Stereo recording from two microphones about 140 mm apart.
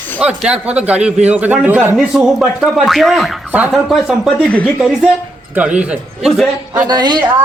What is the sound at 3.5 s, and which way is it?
A man's voice, 10° right (ahead or behind).